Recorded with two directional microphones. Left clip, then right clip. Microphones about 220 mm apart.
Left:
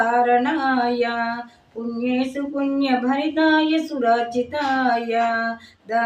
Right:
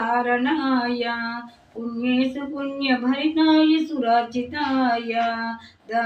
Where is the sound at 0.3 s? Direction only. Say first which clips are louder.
Left 3 dB; 15° left (ahead or behind).